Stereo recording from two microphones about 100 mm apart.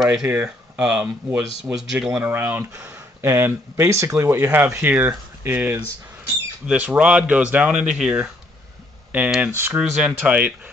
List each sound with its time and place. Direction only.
0.0 s speech: 10° right (ahead or behind)
9.5 s speech: 20° right (ahead or behind)
9.8 s speech: 10° right (ahead or behind)